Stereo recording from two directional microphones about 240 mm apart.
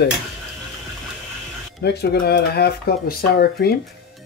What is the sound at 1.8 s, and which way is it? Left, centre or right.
Speech, left.